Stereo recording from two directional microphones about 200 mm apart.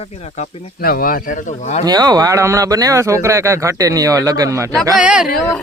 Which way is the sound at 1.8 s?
20° right (ahead or behind).